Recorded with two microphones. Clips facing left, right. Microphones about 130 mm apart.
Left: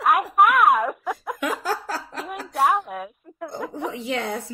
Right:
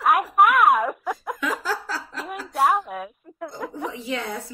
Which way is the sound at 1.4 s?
50° left (ahead or behind).